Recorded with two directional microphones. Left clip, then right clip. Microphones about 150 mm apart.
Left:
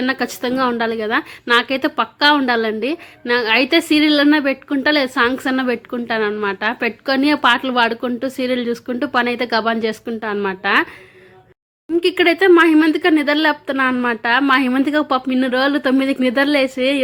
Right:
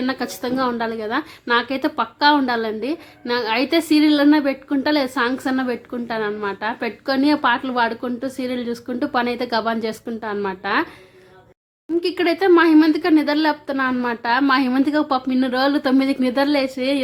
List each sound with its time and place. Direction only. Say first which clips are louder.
0.0 s a woman's voice: left 4 dB; 20° left (ahead or behind)
11.9 s a woman's voice: left 5 dB; 20° left (ahead or behind)